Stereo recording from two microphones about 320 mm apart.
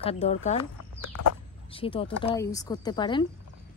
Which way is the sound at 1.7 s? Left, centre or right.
Centre.